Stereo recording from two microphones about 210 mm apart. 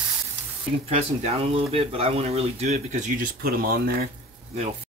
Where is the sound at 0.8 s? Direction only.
30° right (ahead or behind); by 4.1 s 45° right (ahead or behind).